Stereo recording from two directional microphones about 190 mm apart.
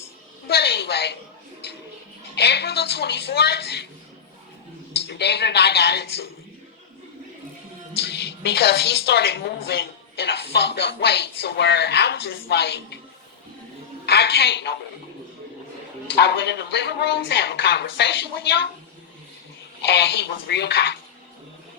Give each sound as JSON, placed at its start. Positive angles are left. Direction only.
{"t": 0.4, "sound": "a sound", "side_deg": 60}
{"t": 2.3, "sound": "a woman's voice", "side_deg": 60}
{"t": 4.9, "sound": "a woman's voice", "side_deg": 60}
{"t": 7.9, "sound": "a woman's voice", "side_deg": 60}
{"t": 14.0, "sound": "a woman's voice", "side_deg": 60}
{"t": 16.1, "sound": "a woman's voice", "side_deg": 60}
{"t": 19.9, "sound": "a woman's voice", "side_deg": 60}